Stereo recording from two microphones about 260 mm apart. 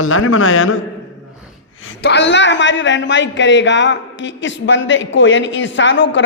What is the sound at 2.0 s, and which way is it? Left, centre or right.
A man's voice, left.